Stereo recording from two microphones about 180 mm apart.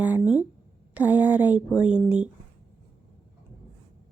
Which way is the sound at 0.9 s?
10° right (ahead or behind).